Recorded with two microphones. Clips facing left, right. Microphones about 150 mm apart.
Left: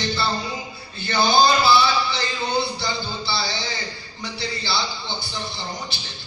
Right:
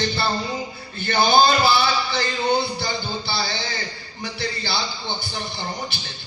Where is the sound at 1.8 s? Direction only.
55° right (ahead or behind).